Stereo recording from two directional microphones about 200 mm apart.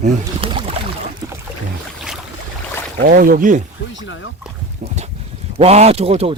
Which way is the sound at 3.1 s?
45° right (ahead or behind).